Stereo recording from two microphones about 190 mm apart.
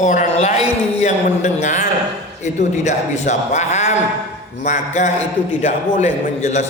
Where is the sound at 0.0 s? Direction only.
40° left (ahead or behind).